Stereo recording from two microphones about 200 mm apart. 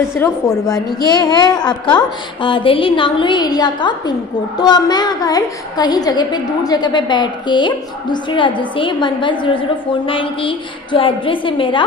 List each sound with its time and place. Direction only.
0.1 s a woman's voice: 15° left (ahead or behind)